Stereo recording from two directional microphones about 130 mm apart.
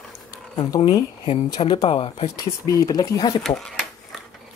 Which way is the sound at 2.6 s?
25° left (ahead or behind).